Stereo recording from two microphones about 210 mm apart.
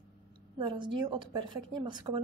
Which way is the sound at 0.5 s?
20° right (ahead or behind).